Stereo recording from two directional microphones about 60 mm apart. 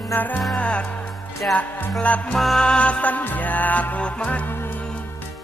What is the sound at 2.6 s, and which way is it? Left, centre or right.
Music, centre.